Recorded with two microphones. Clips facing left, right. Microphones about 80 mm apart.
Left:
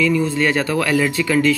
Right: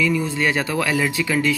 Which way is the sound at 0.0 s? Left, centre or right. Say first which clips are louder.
Left 3 dB; centre.